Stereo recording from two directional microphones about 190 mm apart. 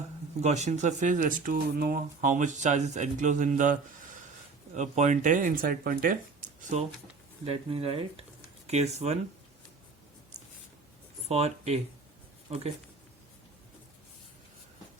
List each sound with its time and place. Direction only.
0.4 s speech: 35° right (ahead or behind)
11.3 s speech: 35° right (ahead or behind)